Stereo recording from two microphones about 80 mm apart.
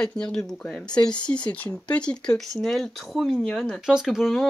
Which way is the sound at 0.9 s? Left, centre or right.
Left.